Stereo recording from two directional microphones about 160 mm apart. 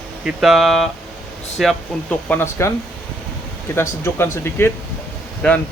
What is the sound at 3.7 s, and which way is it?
Speech, 15° left (ahead or behind).